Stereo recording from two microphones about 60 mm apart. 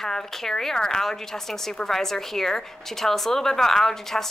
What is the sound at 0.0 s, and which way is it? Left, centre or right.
A woman's voice, centre.